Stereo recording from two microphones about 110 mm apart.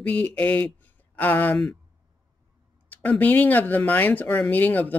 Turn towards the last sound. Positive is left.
turn(degrees=15)  # may be behind; listen again after turning